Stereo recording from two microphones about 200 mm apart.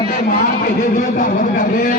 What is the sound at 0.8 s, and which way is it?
Speech, 40° left (ahead or behind).